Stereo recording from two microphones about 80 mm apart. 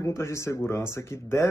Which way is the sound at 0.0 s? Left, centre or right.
Left.